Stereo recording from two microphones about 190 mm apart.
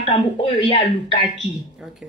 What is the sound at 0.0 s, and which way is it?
Speech, 30° left (ahead or behind).